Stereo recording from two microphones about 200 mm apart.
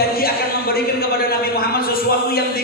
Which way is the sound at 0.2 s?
50° left (ahead or behind).